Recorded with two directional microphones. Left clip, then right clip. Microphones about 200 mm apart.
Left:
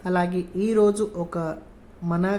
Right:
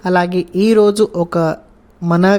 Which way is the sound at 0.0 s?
40° right (ahead or behind).